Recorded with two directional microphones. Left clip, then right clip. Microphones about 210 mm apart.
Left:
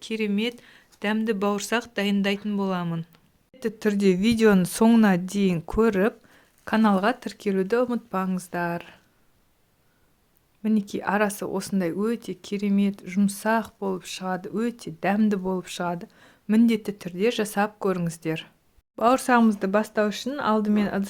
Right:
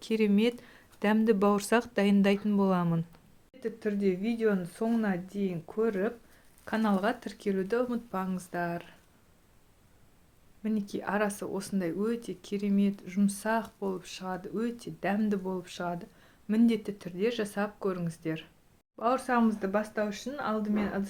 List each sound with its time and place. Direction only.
0.0 s speech: 5° right (ahead or behind)
3.6 s speech: 40° left (ahead or behind); by 9.0 s 25° left (ahead or behind)
10.6 s speech: 25° left (ahead or behind)
18.9 s speech: 55° left (ahead or behind)